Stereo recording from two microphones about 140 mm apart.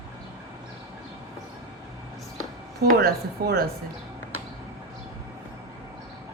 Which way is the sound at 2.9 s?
90° right.